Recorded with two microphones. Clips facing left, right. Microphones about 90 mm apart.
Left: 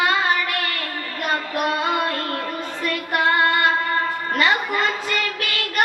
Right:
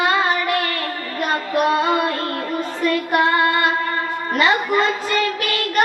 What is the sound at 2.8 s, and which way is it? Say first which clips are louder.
Child singing: right 5 dB; 30° right (ahead or behind).